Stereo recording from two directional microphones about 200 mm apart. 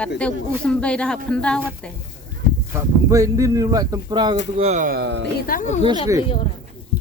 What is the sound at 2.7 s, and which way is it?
Speech, 15° right (ahead or behind).